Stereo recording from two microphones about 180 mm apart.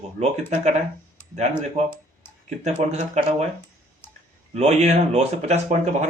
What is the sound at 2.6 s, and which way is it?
Speech, 40° right (ahead or behind).